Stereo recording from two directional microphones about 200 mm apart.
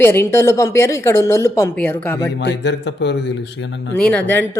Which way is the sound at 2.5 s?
60° left (ahead or behind).